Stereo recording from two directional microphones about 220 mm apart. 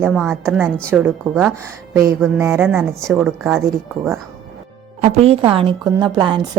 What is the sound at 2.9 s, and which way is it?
Speech, centre (ahead or behind).